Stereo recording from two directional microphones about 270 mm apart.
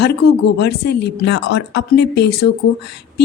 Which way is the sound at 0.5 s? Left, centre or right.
Left.